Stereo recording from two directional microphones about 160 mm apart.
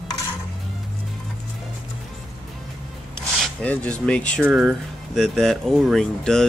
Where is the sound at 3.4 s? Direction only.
10° left (ahead or behind).